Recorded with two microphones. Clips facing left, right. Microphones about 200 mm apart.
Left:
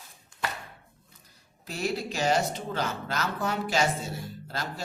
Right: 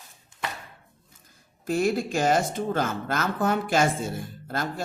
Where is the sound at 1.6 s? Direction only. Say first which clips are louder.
Right 7 dB; 50° right (ahead or behind).